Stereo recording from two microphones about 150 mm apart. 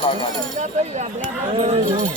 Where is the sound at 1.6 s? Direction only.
40° right (ahead or behind).